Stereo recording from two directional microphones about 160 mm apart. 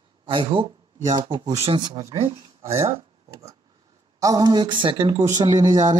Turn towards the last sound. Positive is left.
turn(degrees=-25)  # may be behind; listen again after turning